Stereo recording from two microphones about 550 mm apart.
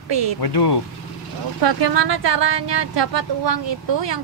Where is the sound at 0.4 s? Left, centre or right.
Left.